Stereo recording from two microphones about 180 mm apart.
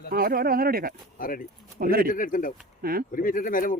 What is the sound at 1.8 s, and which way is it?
Speech, 55° right (ahead or behind).